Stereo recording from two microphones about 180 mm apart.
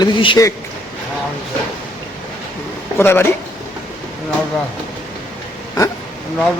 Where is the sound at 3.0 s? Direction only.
10° left (ahead or behind).